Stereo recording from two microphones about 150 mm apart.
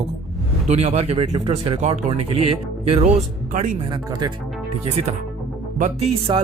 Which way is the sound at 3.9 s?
30° right (ahead or behind).